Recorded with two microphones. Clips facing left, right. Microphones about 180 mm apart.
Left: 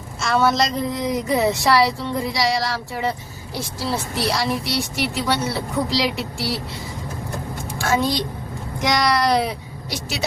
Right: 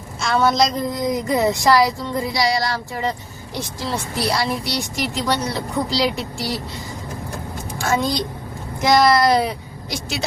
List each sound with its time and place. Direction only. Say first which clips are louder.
0.2 s a woman's voice: right 1 dB; centre (ahead or behind)
7.8 s a sound: even; centre (ahead or behind)
8.8 s a woman's voice: right 5 dB; centre (ahead or behind)